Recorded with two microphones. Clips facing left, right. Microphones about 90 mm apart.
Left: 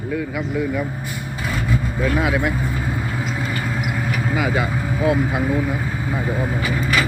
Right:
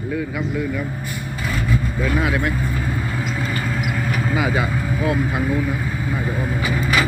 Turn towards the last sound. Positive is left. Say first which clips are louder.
# right 1 dB
turn(degrees=-15)  # may be behind; listen again after turning